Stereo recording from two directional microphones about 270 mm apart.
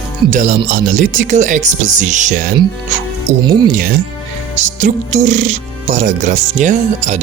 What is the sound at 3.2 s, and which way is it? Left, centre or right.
Speech, centre.